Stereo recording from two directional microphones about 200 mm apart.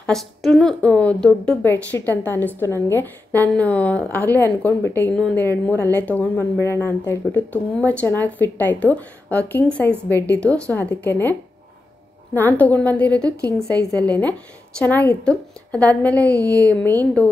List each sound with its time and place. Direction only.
0.0 s a woman's voice: 5° left (ahead or behind)
12.4 s a woman's voice: 10° left (ahead or behind)
13.4 s a sound: 15° right (ahead or behind)
13.7 s a woman's voice: 5° left (ahead or behind)
16.3 s a sound: 15° right (ahead or behind)
17.0 s a woman's voice: 5° left (ahead or behind)